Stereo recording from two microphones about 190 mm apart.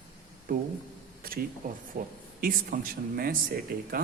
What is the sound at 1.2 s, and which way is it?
Speech, 50° right (ahead or behind).